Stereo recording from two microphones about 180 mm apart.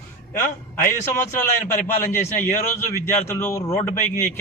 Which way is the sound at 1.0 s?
15° left (ahead or behind).